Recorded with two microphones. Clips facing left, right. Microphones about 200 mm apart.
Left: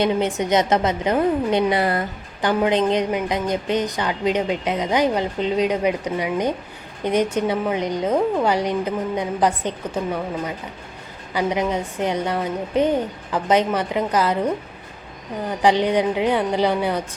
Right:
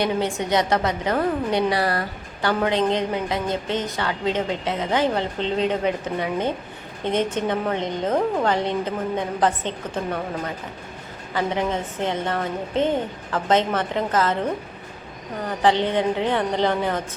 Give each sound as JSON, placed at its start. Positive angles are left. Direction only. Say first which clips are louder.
{"t": 0.0, "sound": "a woman's voice", "louder": "left 3 dB", "side_deg": 20}
{"t": 15.4, "sound": "a woman's voice", "louder": "left 2 dB", "side_deg": 15}